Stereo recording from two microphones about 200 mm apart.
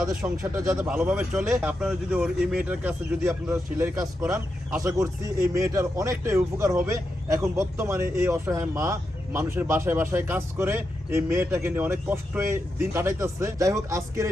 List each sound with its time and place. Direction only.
0.0 s a man's voice: 5° right (ahead or behind)